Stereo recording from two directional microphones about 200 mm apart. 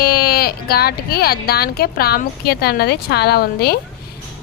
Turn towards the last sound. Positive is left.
turn(degrees=50)  # may be behind; listen again after turning